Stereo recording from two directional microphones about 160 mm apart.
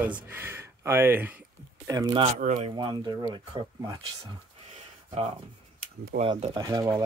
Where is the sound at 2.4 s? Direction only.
50° right (ahead or behind).